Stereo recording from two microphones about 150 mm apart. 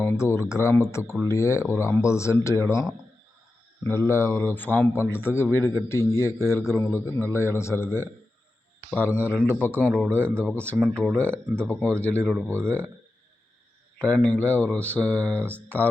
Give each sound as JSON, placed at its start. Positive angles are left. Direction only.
{"t": 0.0, "sound": "a man's voice", "side_deg": 15}
{"t": 3.8, "sound": "a man's voice", "side_deg": 15}
{"t": 9.1, "sound": "speech", "side_deg": -10}
{"t": 9.4, "sound": "a man's voice", "side_deg": 10}
{"t": 9.7, "sound": "speech", "side_deg": -10}
{"t": 10.4, "sound": "a man's voice", "side_deg": 10}
{"t": 14.0, "sound": "a man's voice", "side_deg": 5}
{"t": 15.3, "sound": "speech", "side_deg": -15}